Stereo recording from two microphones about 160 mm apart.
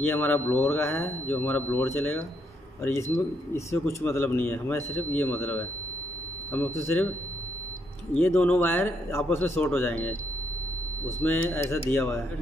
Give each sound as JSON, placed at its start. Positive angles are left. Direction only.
{"t": 0.0, "sound": "speech", "side_deg": 15}
{"t": 8.2, "sound": "speech", "side_deg": 10}
{"t": 11.2, "sound": "speech", "side_deg": 15}